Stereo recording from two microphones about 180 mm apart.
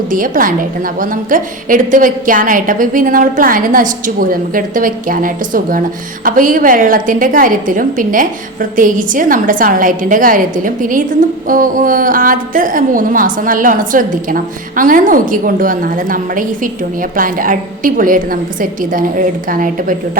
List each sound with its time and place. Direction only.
0.1 s a woman's voice: 50° right (ahead or behind)